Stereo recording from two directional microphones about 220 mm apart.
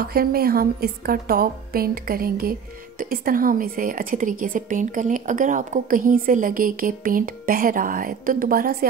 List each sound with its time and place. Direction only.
0.0 s a woman's voice: 45° right (ahead or behind)